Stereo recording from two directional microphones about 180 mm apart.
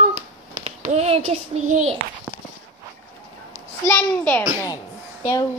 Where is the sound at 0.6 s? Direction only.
35° right (ahead or behind).